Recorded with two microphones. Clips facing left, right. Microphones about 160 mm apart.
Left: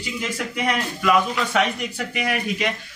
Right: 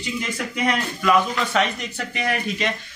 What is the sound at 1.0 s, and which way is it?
Speech, 10° left (ahead or behind).